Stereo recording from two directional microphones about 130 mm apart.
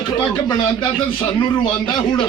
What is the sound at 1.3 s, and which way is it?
Speech, 35° left (ahead or behind).